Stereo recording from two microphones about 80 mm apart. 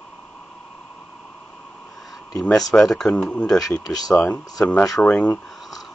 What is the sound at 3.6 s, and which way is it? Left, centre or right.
Speech, left.